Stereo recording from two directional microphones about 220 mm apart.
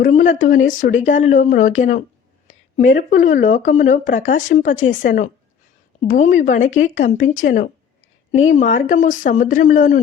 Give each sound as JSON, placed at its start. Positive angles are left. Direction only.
{"t": 0.0, "sound": "speech", "side_deg": 35}